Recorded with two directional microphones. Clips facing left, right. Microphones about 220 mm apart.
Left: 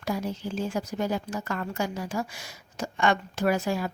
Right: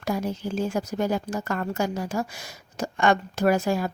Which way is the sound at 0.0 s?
45° right (ahead or behind).